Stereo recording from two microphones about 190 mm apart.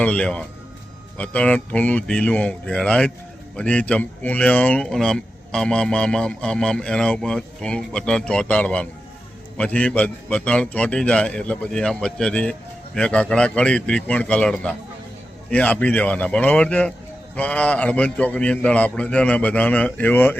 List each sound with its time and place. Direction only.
0.0 s a man's voice: 5° left (ahead or behind)